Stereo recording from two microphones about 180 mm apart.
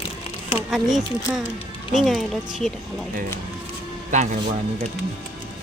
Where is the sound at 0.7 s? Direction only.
Centre (ahead or behind).